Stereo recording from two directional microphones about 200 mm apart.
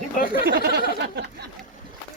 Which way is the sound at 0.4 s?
55° right (ahead or behind).